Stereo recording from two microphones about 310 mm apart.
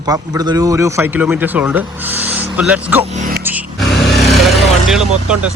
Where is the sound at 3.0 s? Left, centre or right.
Right.